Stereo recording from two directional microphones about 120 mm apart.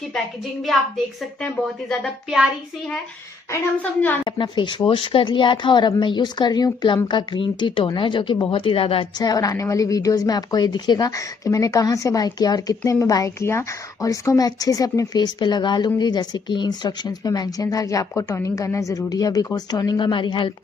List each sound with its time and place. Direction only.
0.1 s a woman's voice: centre (ahead or behind)
4.2 s a woman's voice: 40° left (ahead or behind)
9.2 s a woman's voice: 30° left (ahead or behind)